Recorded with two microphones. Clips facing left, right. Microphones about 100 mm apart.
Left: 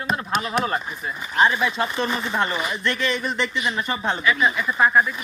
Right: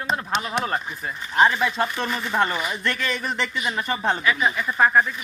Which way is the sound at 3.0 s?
45° right (ahead or behind).